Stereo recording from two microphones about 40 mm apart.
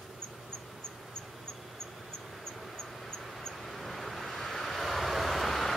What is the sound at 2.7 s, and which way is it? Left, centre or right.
Vehicle, centre.